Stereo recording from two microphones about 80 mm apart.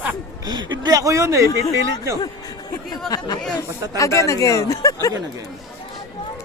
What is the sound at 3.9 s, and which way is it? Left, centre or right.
Speech, left.